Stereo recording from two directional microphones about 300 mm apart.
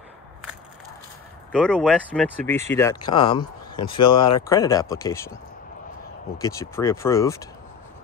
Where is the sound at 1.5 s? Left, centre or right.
Centre.